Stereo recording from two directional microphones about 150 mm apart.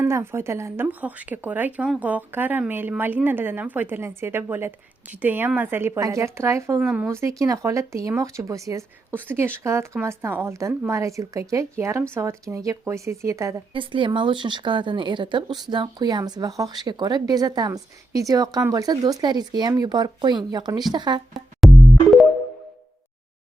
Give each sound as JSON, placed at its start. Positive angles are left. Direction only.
{"t": 0.0, "sound": "speech", "side_deg": -15}
{"t": 6.8, "sound": "speech", "side_deg": -10}
{"t": 13.7, "sound": "speech", "side_deg": -35}
{"t": 21.6, "sound": "music", "side_deg": 0}